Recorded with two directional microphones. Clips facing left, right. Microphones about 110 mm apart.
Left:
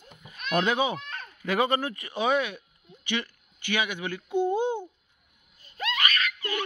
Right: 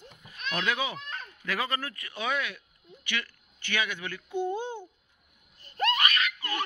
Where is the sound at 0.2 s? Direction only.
25° left (ahead or behind).